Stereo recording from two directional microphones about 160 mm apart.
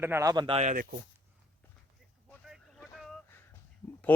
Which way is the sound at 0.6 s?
60° right (ahead or behind).